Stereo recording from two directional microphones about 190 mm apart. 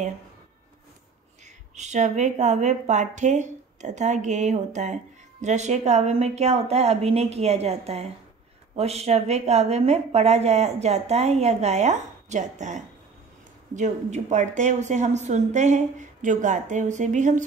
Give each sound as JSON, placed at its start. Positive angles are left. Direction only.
{"t": 1.8, "sound": "speech", "side_deg": -40}